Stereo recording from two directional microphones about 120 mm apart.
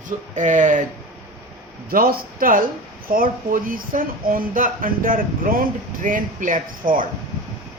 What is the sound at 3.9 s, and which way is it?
Speech, 90° right.